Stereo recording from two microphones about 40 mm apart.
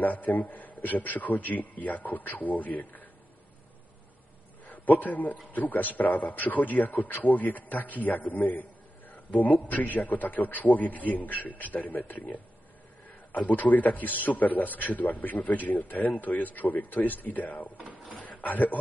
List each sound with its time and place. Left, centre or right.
0.0 s speech: left
4.6 s a man's voice: left
17.7 s drawer open or close: right
18.4 s a man's voice: left